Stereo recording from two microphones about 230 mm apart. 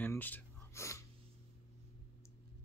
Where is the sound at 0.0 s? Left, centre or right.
Centre.